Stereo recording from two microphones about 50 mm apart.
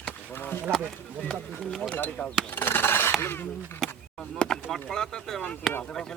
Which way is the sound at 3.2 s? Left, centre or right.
Left.